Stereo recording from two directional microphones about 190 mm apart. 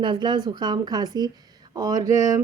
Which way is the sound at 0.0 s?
25° right (ahead or behind).